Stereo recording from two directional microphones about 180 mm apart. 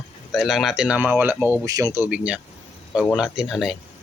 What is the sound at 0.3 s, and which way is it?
Speech, centre (ahead or behind).